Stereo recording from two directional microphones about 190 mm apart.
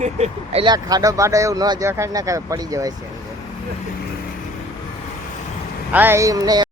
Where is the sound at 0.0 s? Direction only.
35° right (ahead or behind).